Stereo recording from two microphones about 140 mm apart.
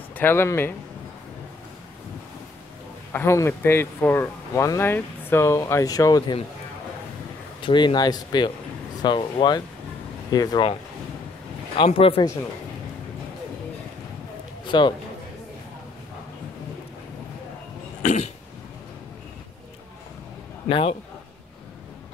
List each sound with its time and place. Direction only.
0.1 s speech: 15° left (ahead or behind)
3.1 s speech: 15° left (ahead or behind)
7.6 s speech: 35° left (ahead or behind)
14.7 s a man's voice: 35° left (ahead or behind)
18.0 s throat clearing: 55° left (ahead or behind)
20.6 s a man's voice: 40° left (ahead or behind)